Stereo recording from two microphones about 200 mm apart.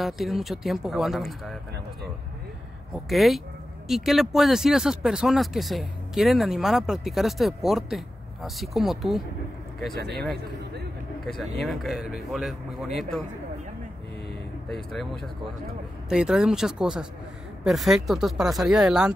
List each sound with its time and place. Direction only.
0.0 s speech: centre (ahead or behind)
2.9 s speech: centre (ahead or behind)
10.3 s speech: 55° right (ahead or behind)
11.2 s speech: centre (ahead or behind)
14.7 s speech: centre (ahead or behind)
16.1 s speech: 5° right (ahead or behind)